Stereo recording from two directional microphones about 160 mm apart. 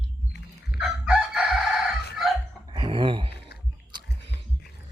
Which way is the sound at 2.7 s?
30° right (ahead or behind).